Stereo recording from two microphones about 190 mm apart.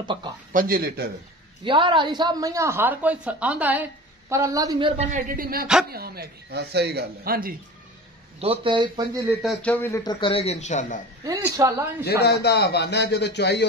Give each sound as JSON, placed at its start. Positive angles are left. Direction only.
{"t": 0.0, "sound": "speech", "side_deg": -25}
{"t": 0.5, "sound": "speech", "side_deg": -50}
{"t": 1.6, "sound": "speech", "side_deg": -25}
{"t": 4.9, "sound": "speech", "side_deg": -45}
{"t": 8.4, "sound": "a man's voice", "side_deg": -30}
{"t": 9.4, "sound": "speech", "side_deg": 5}
{"t": 10.2, "sound": "speech", "side_deg": 30}
{"t": 11.2, "sound": "speech", "side_deg": -15}
{"t": 12.0, "sound": "speech", "side_deg": 60}